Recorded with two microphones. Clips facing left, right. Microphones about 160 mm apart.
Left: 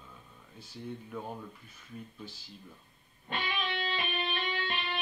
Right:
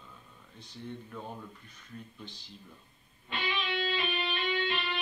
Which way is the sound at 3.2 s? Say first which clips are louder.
Even; 50° left (ahead or behind).